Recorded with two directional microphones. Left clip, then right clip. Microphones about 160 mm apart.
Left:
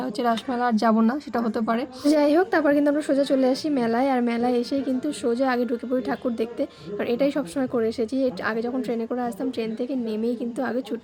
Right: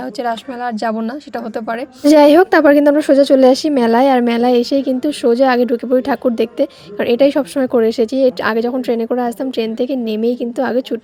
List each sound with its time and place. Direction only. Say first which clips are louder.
0.2 s a woman's voice: right 3 dB; 20° right (ahead or behind)
1.5 s a woman's voice: right 4 dB; 30° right (ahead or behind)
2.1 s a woman's voice: right 12 dB; 40° right (ahead or behind)